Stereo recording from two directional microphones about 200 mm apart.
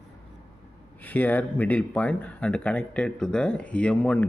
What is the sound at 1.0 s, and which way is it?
Speech, 10° left (ahead or behind).